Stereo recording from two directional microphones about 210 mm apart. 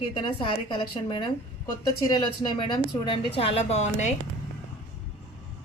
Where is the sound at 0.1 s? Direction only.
20° left (ahead or behind).